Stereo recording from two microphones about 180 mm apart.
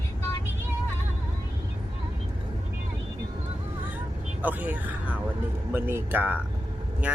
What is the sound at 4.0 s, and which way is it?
Vehicle, 10° right (ahead or behind).